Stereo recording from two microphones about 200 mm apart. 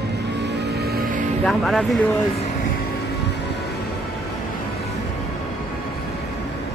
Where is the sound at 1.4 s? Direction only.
Centre (ahead or behind).